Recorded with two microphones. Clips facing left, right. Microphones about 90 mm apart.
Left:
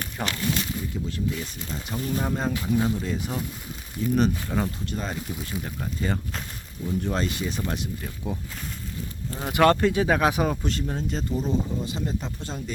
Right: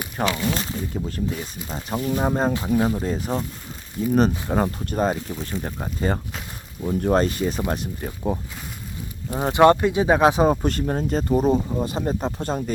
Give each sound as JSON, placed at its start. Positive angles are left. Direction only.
{"t": 0.2, "sound": "speech", "side_deg": -40}
{"t": 4.4, "sound": "speech", "side_deg": -45}
{"t": 9.4, "sound": "speech", "side_deg": -25}
{"t": 10.6, "sound": "speech", "side_deg": -50}